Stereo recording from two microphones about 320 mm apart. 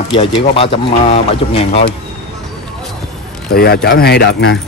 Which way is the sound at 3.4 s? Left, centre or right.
Left.